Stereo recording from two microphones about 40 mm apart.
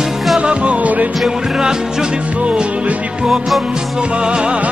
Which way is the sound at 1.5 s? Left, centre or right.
Centre.